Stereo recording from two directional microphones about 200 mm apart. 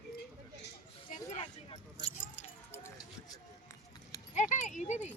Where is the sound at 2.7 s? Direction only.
10° left (ahead or behind).